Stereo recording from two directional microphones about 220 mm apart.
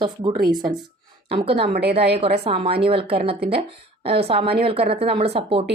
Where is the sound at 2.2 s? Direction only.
25° right (ahead or behind).